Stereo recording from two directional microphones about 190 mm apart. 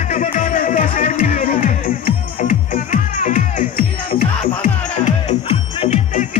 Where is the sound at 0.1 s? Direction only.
45° left (ahead or behind).